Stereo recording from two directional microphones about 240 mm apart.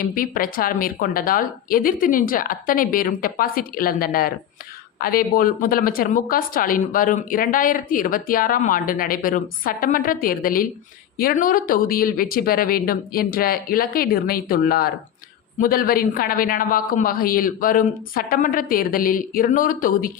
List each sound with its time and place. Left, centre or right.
0.0 s speech: left